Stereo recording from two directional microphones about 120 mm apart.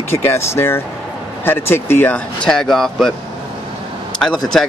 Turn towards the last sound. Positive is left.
turn(degrees=5)  # may be behind; listen again after turning